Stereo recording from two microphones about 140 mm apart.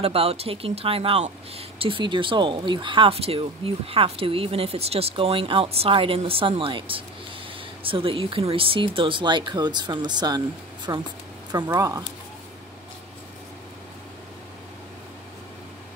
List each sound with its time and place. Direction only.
0.0 s speech: 45° right (ahead or behind); by 12.0 s 25° right (ahead or behind)